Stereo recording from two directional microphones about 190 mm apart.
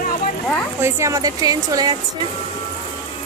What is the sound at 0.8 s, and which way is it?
Speech, 15° right (ahead or behind).